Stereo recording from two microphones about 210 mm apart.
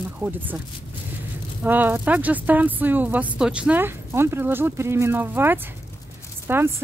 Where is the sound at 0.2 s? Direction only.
10° right (ahead or behind).